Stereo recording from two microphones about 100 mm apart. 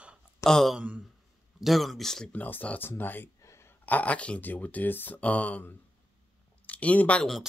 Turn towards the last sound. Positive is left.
turn(degrees=15)  # may be behind; listen again after turning